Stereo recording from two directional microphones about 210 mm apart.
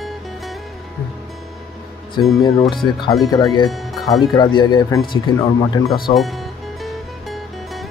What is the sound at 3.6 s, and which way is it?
Speech, centre (ahead or behind).